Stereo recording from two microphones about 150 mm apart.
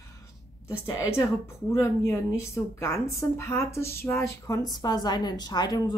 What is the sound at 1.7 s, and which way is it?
A woman's voice, 20° left (ahead or behind).